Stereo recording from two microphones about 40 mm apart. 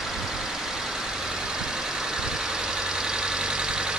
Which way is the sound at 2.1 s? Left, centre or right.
Centre.